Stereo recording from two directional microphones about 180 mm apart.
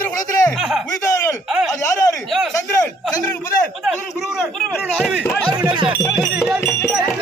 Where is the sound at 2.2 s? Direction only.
Centre (ahead or behind).